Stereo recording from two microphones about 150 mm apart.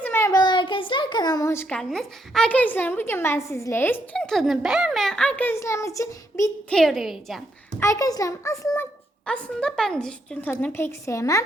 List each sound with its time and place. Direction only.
0.0 s a sound: 15° left (ahead or behind)
1.7 s a woman's voice: 5° left (ahead or behind); by 6.5 s 20° left (ahead or behind)
6.7 s a woman's voice: centre (ahead or behind)
7.8 s a woman's voice: 20° left (ahead or behind)